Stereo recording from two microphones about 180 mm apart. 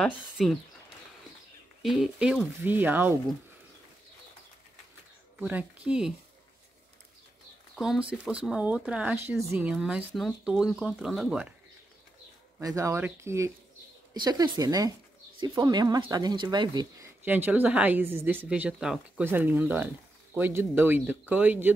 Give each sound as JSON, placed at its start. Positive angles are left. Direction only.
{"t": 0.0, "sound": "speech", "side_deg": 0}
{"t": 1.8, "sound": "a woman's voice", "side_deg": 0}
{"t": 5.4, "sound": "a woman's voice", "side_deg": -10}
{"t": 7.7, "sound": "speech", "side_deg": 0}
{"t": 12.5, "sound": "a woman's voice", "side_deg": -15}
{"t": 17.2, "sound": "a woman's voice", "side_deg": -10}